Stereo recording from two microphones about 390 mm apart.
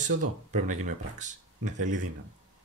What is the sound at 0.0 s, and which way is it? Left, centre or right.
Speech, centre.